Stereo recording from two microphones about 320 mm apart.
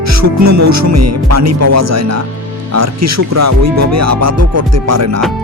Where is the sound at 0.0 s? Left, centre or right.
Right.